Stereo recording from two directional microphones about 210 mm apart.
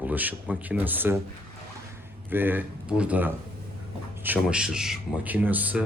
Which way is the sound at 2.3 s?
10° right (ahead or behind).